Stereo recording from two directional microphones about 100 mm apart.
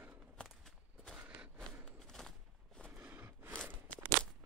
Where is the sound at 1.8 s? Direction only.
5° left (ahead or behind).